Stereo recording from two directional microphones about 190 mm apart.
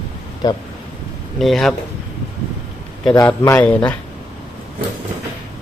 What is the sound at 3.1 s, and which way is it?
Speech, 15° left (ahead or behind).